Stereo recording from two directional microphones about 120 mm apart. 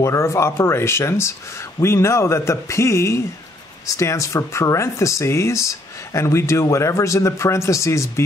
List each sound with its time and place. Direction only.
0.0 s speech: 25° left (ahead or behind)